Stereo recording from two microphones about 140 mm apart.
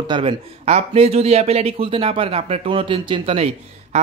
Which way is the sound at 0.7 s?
50° right (ahead or behind).